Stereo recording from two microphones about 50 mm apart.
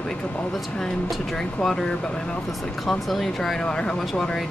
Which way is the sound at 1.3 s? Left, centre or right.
Centre.